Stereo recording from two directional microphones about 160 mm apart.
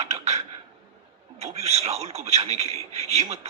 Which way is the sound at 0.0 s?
45° right (ahead or behind).